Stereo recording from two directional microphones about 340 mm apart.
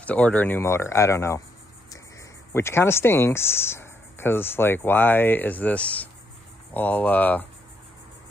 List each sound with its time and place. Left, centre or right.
0.0 s speech: centre
2.5 s speech: centre